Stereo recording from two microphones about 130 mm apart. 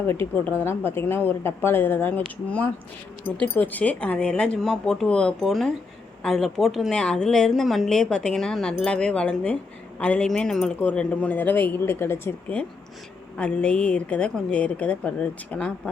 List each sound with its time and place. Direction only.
0.1 s a woman's voice: 20° left (ahead or behind)